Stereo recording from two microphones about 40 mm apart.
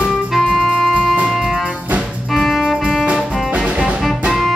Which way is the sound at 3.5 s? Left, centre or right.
Right.